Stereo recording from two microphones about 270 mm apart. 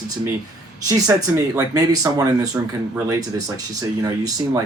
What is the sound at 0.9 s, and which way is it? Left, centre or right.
Speech, centre.